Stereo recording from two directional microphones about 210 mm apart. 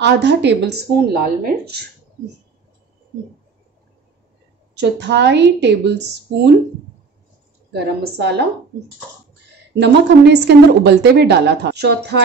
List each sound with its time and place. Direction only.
0.0 s speech: 55° right (ahead or behind)
4.7 s speech: 55° right (ahead or behind)
7.7 s a woman's voice: 50° right (ahead or behind)
9.8 s a woman's voice: 55° right (ahead or behind)